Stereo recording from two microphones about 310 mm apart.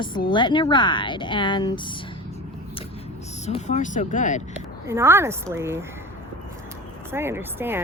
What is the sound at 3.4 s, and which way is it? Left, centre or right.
Speech, left.